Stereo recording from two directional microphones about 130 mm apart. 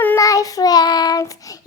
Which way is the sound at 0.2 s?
25° left (ahead or behind).